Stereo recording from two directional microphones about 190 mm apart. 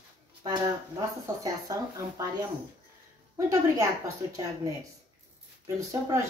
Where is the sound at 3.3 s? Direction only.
15° right (ahead or behind).